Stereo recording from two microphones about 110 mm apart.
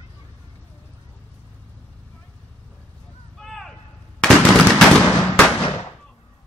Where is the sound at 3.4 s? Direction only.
5° left (ahead or behind).